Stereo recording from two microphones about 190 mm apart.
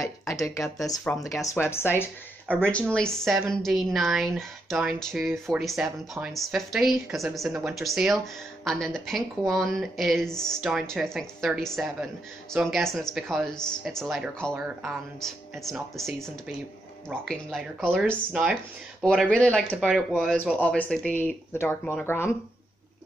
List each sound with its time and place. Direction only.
0.2 s speech: 15° left (ahead or behind); by 5.9 s 5° right (ahead or behind)
5.9 s speech: 15° right (ahead or behind)
6.3 s speech: centre (ahead or behind)